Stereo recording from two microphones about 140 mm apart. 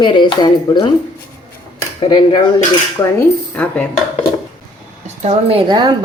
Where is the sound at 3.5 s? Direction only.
10° left (ahead or behind).